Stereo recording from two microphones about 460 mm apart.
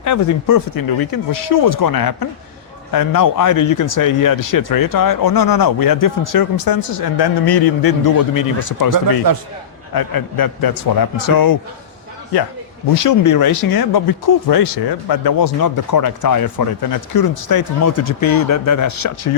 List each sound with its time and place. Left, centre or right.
0.0 s speech: left
9.3 s a man's voice: right
9.9 s speech: left
12.9 s speech: left
13.7 s speech: left
15.6 s speech: left